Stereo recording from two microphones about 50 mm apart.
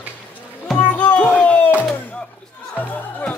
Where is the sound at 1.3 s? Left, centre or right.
Left.